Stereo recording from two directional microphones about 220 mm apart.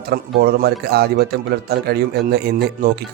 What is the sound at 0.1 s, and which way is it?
Speech, 45° right (ahead or behind).